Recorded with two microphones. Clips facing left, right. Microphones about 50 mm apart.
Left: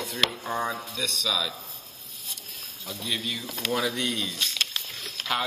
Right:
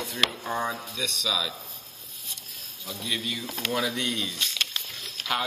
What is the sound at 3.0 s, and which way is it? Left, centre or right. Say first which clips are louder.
Speech: even; centre.